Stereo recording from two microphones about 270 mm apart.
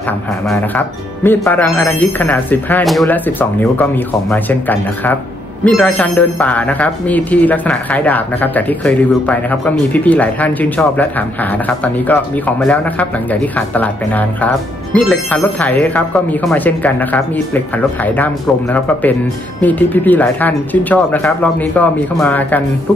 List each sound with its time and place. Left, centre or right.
0.5 s speech: centre